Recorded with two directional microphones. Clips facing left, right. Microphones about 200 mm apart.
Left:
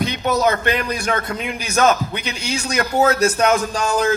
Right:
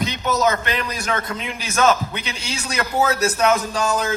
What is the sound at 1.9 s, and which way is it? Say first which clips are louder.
Speech: left 1 dB; 30° right (ahead or behind).